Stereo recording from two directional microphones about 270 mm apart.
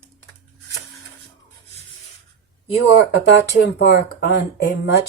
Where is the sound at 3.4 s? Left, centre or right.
Left.